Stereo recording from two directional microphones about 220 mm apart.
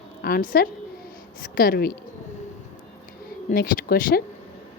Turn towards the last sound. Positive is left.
turn(degrees=40)  # may be behind; listen again after turning